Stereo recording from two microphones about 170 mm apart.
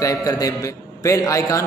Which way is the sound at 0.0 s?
20° left (ahead or behind).